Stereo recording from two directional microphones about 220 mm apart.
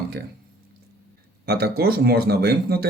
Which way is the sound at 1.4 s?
45° right (ahead or behind).